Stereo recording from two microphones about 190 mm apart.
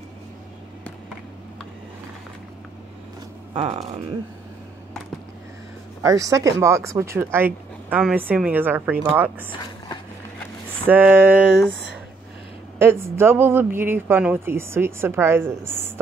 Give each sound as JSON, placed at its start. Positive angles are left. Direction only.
{"t": 3.5, "sound": "speech", "side_deg": -30}
{"t": 6.0, "sound": "speech", "side_deg": -15}
{"t": 10.9, "sound": "speech", "side_deg": -10}
{"t": 12.7, "sound": "speech", "side_deg": -10}